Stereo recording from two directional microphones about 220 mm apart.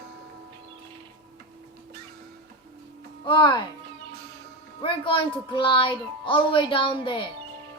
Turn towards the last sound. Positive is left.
turn(degrees=20)  # may be behind; listen again after turning